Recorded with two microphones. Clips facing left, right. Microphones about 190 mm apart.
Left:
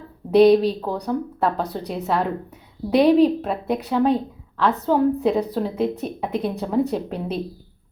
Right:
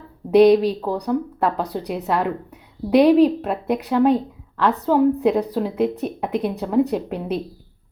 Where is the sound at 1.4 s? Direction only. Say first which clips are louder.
Right 1 dB; 10° right (ahead or behind).